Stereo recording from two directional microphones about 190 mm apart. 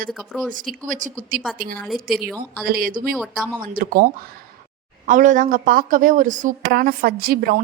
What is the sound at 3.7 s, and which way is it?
A woman's voice, 45° right (ahead or behind).